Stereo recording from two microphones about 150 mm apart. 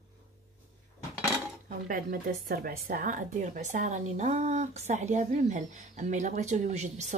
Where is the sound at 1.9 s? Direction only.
70° right (ahead or behind).